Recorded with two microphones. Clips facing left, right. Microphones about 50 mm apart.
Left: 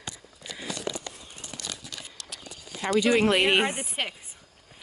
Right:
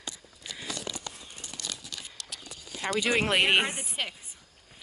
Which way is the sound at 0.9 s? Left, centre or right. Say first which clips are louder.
Left 6 dB; left.